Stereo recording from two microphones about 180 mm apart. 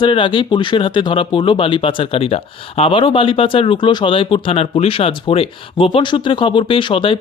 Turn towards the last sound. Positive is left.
turn(degrees=30)  # may be behind; listen again after turning